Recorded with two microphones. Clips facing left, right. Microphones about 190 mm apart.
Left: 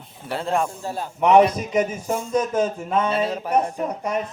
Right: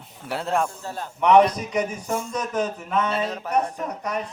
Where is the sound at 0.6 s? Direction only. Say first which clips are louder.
Left 3 dB; 10° left (ahead or behind).